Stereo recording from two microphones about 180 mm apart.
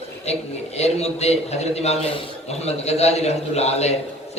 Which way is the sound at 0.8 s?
35° left (ahead or behind).